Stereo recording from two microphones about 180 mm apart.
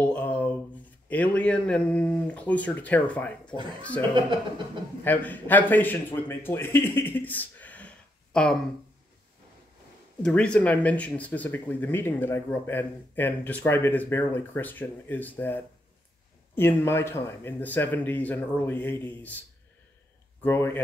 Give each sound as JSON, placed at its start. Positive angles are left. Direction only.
{"t": 0.0, "sound": "a sound", "side_deg": 5}
{"t": 1.0, "sound": "speech", "side_deg": 10}
{"t": 4.1, "sound": "speech", "side_deg": -25}
{"t": 5.0, "sound": "a man's voice", "side_deg": 10}
{"t": 10.2, "sound": "speech", "side_deg": 5}
{"t": 20.4, "sound": "speech", "side_deg": 10}